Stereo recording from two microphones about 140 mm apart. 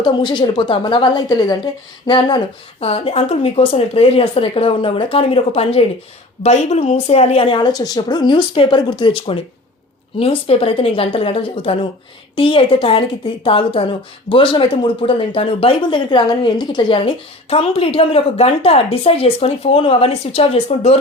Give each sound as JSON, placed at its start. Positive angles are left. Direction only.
{"t": 0.0, "sound": "speech", "side_deg": 35}
{"t": 2.8, "sound": "speech", "side_deg": 45}